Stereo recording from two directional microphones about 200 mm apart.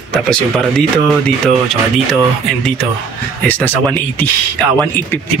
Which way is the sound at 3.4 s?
10° left (ahead or behind).